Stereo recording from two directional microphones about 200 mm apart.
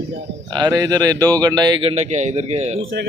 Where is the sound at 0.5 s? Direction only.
20° right (ahead or behind).